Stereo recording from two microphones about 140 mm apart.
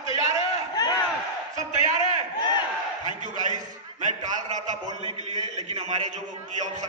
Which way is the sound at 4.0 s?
60° right (ahead or behind).